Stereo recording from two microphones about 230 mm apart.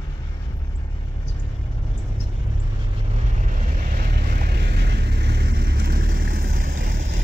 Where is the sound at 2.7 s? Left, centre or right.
Right.